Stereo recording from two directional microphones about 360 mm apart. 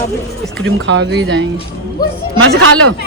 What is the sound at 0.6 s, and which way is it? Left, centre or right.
Speech, right.